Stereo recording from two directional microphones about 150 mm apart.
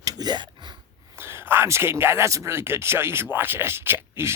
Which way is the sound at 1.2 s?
15° right (ahead or behind).